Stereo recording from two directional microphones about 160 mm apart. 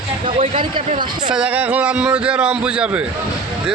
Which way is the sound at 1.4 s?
10° right (ahead or behind).